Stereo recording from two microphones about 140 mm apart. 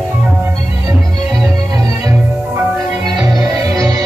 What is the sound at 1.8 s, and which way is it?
Music, 25° right (ahead or behind).